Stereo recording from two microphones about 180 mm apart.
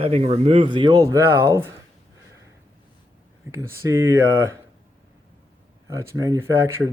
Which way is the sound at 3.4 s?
15° right (ahead or behind).